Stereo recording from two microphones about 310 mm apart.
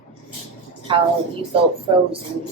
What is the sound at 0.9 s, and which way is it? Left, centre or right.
Speech, centre.